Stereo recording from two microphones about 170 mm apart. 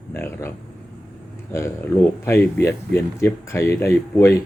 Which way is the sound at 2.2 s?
15° left (ahead or behind).